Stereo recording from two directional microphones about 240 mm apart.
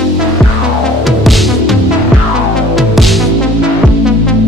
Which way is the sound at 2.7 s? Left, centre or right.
Centre.